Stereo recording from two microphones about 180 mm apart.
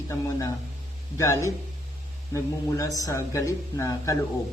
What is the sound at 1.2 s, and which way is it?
Speech, 15° left (ahead or behind).